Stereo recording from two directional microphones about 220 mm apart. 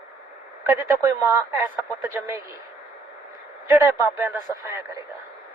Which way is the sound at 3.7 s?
10° right (ahead or behind).